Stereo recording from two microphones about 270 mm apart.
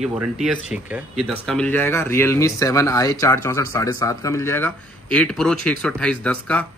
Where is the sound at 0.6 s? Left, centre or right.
Centre.